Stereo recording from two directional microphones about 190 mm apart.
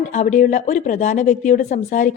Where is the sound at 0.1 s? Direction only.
40° left (ahead or behind).